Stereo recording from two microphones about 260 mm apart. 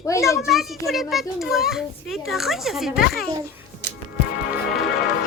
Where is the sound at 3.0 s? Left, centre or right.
Left.